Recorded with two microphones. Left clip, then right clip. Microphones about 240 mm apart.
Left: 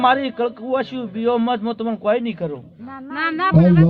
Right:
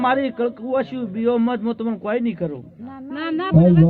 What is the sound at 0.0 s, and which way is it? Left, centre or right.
A man's voice, left.